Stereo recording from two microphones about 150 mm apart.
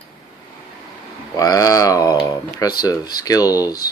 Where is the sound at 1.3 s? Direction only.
25° left (ahead or behind).